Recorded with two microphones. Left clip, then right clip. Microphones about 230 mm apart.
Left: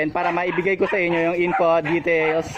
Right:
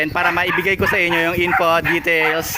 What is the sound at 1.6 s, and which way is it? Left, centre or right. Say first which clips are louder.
Speech: even; right.